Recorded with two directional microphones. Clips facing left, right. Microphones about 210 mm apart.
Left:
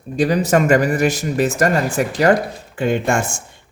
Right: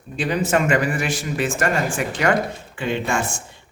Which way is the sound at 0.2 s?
40° left (ahead or behind).